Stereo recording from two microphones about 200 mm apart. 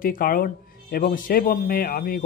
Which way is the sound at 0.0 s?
45° left (ahead or behind).